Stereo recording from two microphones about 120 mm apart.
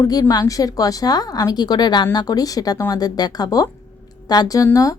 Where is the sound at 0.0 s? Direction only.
30° left (ahead or behind).